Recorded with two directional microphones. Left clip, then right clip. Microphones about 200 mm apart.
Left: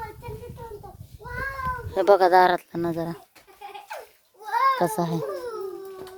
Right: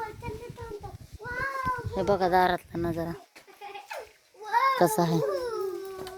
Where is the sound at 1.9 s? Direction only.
55° left (ahead or behind).